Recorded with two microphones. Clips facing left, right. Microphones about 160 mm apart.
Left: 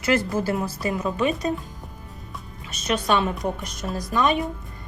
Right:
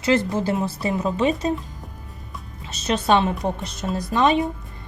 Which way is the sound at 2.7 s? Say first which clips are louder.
Right 3 dB; 30° right (ahead or behind).